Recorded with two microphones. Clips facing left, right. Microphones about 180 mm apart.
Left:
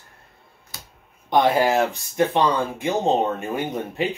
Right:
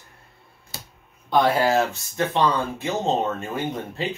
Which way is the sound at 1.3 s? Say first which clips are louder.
Left 1 dB; 15° left (ahead or behind).